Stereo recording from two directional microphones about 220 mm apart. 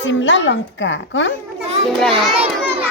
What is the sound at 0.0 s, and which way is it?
A woman's voice, 55° left (ahead or behind).